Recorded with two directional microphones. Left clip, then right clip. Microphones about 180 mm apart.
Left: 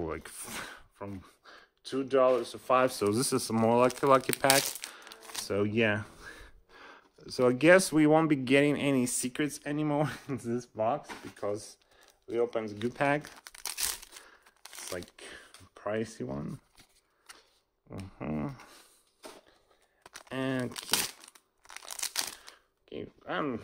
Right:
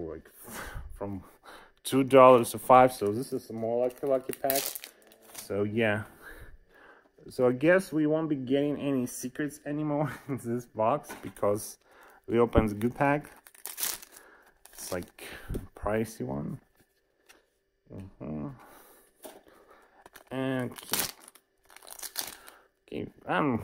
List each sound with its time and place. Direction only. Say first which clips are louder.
0.0 s speech: left 3 dB; 20° left (ahead or behind)
0.5 s speech: right 1 dB; 10° right (ahead or behind); by 2.8 s 30° right (ahead or behind)
3.1 s speech: left 3 dB; 30° left (ahead or behind)
4.8 s crumpling: left 4 dB; 5° right (ahead or behind)
5.2 s a sound: left 1 dB; 10° left (ahead or behind)
7.7 s speech: left 3 dB; 20° left (ahead or behind)
10.1 s speech: right 1 dB; 10° right (ahead or behind)
10.8 s speech: right 4 dB; 25° right (ahead or behind)
12.8 s speech: right 2 dB; 15° right (ahead or behind)
13.2 s crumpling: left 4 dB; 5° left (ahead or behind)
14.9 s speech: right 4 dB; 25° right (ahead or behind)
17.8 s speech: left 3 dB; 10° left (ahead or behind)
20.0 s crumpling: right 1 dB; centre (ahead or behind)
22.8 s speech: right 5 dB; 25° right (ahead or behind)